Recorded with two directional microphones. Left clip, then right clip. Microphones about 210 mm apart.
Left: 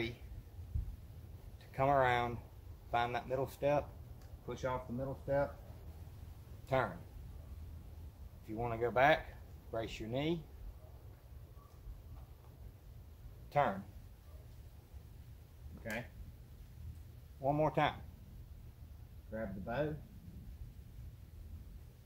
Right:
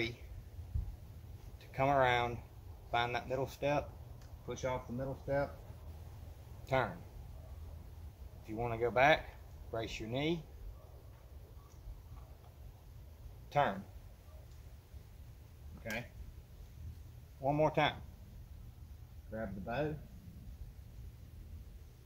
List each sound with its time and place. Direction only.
1.8 s speech: 5° right (ahead or behind)
6.6 s speech: 5° left (ahead or behind)
8.5 s speech: centre (ahead or behind)
13.5 s speech: 5° right (ahead or behind)
17.4 s speech: 5° right (ahead or behind)
19.3 s speech: centre (ahead or behind)